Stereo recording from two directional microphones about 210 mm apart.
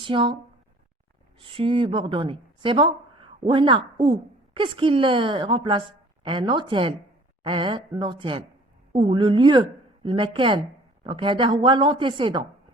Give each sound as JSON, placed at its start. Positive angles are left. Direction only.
{"t": 0.0, "sound": "a woman's voice", "side_deg": -25}
{"t": 1.4, "sound": "a woman's voice", "side_deg": -25}